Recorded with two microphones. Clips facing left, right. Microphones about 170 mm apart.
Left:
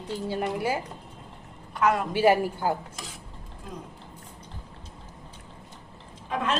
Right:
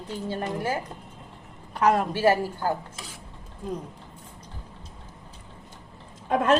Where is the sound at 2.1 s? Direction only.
15° left (ahead or behind).